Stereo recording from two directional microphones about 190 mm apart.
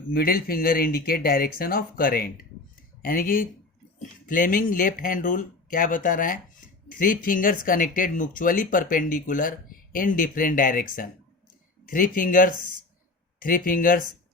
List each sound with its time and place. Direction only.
0.1 s speech: 50° left (ahead or behind)